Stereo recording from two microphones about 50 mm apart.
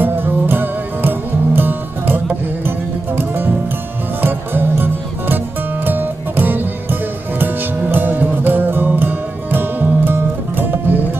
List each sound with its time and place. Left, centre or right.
0.0 s music: right